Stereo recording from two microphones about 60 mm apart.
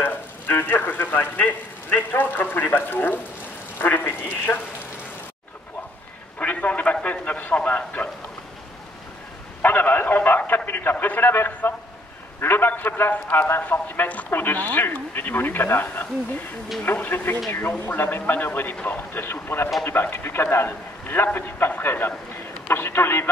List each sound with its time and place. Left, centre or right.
0.0 s speech: left
6.4 s a man's voice: left
9.6 s speech: left